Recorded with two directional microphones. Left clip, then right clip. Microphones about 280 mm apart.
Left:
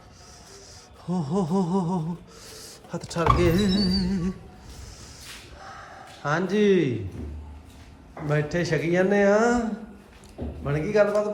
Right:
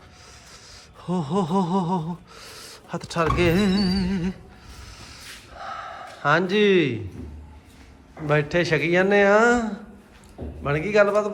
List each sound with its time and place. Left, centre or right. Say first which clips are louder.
1.0 s gasp: right 3 dB; centre
5.5 s a sound: right 12 dB; centre
8.3 s a man's voice: right 5 dB; centre